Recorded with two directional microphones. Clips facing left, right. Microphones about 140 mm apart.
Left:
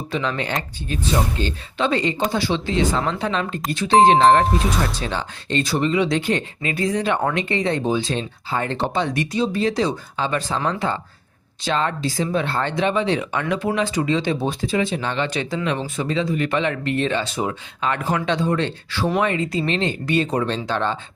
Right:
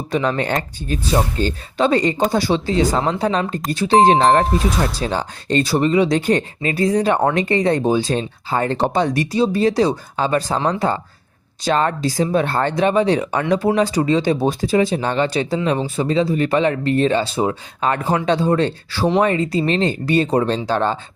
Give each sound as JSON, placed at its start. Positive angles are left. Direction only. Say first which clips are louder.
{"t": 0.1, "sound": "speech", "louder": "right 5 dB", "side_deg": -45}